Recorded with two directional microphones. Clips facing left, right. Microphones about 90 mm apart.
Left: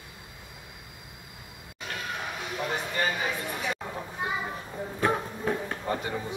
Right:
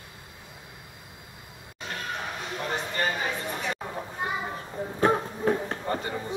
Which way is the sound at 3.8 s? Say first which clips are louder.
Right 1 dB; 10° right (ahead or behind).